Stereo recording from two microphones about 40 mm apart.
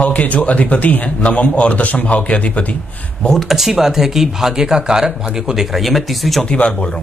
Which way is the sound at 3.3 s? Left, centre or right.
Centre.